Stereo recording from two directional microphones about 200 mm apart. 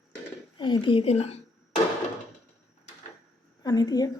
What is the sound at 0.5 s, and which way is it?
Speech, 25° left (ahead or behind).